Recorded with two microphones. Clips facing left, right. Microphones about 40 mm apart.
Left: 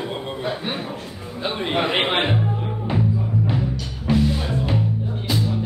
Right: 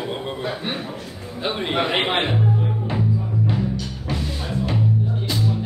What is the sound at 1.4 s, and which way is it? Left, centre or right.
Speech, centre.